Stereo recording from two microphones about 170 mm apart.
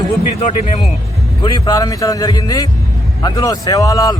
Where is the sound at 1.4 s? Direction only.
25° left (ahead or behind).